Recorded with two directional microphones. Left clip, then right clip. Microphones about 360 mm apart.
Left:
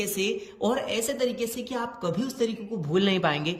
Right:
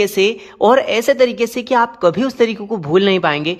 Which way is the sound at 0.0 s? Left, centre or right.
Centre.